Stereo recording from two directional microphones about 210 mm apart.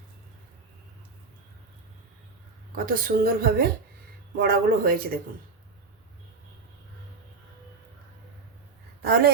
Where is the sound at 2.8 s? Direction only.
45° right (ahead or behind).